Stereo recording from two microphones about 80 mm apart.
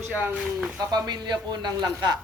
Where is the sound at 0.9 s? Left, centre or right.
Right.